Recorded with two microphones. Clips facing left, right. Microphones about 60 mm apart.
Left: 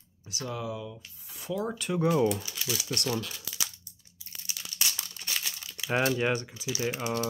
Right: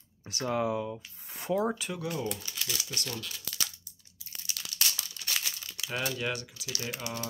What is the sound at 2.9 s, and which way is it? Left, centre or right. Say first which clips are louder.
Speech: left 7 dB; left.